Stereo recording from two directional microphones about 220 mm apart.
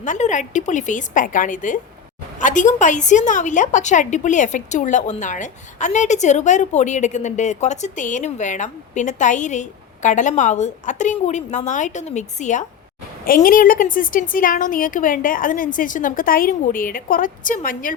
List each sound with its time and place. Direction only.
0.0 s a woman's voice: 35° left (ahead or behind)